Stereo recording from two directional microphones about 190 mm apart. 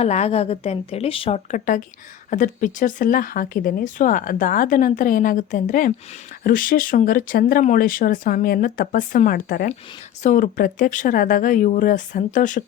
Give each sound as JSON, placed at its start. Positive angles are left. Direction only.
{"t": 0.0, "sound": "speech", "side_deg": 35}